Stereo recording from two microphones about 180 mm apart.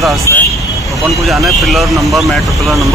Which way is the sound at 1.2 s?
Centre (ahead or behind).